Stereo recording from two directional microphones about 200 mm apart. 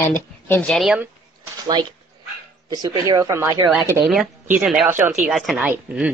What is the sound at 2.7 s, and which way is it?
Speech, 20° right (ahead or behind).